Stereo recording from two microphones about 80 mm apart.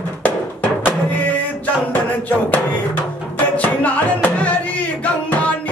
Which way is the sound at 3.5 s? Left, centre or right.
Centre.